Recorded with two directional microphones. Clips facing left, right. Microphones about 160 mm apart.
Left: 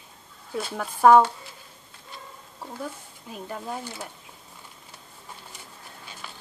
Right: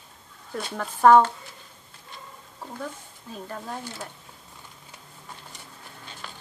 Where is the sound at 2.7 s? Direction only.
10° left (ahead or behind).